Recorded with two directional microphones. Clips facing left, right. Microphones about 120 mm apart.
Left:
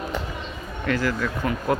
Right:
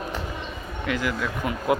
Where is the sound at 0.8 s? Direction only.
10° right (ahead or behind).